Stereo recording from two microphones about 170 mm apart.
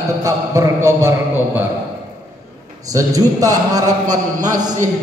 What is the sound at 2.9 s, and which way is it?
Speech, 20° right (ahead or behind).